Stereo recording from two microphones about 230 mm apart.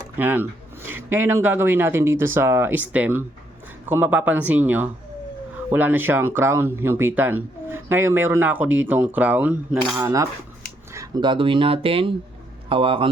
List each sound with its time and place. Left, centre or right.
0.2 s speech: centre; by 13.1 s right